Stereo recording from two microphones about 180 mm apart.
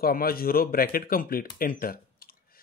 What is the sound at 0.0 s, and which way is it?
Speech, 55° left (ahead or behind).